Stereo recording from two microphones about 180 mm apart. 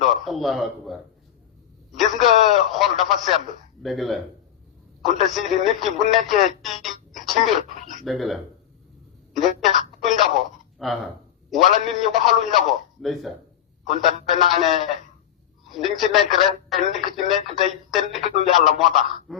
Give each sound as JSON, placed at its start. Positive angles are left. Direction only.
{"t": 0.0, "sound": "speech", "side_deg": 0}
{"t": 2.0, "sound": "speech", "side_deg": 0}
{"t": 7.6, "sound": "speech", "side_deg": -40}
{"t": 8.0, "sound": "speech", "side_deg": 0}
{"t": 9.3, "sound": "telephone", "side_deg": 0}
{"t": 10.8, "sound": "speech", "side_deg": 0}
{"t": 14.5, "sound": "speech", "side_deg": 0}
{"t": 16.0, "sound": "speech", "side_deg": 0}